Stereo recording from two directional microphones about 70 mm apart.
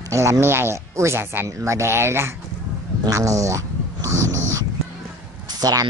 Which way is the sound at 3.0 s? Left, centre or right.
Right.